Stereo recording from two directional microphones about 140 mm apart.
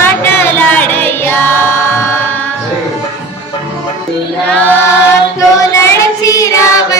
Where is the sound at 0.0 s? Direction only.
15° left (ahead or behind).